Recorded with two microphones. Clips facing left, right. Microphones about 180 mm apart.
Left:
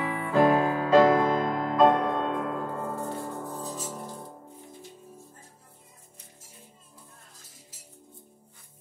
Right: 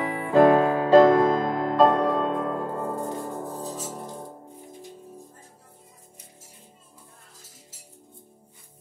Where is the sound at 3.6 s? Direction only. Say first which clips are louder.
Right 2 dB; 15° right (ahead or behind).